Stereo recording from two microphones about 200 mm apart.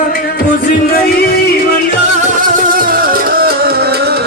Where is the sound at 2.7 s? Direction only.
45° right (ahead or behind).